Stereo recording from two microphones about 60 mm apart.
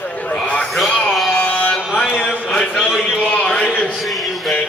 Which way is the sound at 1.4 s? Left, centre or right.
Left.